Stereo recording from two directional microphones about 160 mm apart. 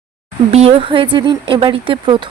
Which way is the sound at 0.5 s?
35° right (ahead or behind).